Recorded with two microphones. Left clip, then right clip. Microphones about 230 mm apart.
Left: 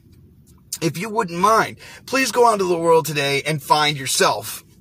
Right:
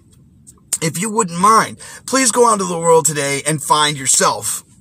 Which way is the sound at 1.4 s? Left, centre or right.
Centre.